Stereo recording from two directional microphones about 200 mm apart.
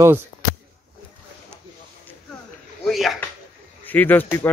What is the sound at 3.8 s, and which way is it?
Speech, 10° left (ahead or behind).